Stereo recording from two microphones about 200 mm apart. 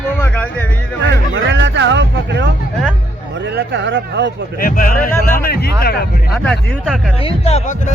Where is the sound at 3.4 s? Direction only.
55° right (ahead or behind).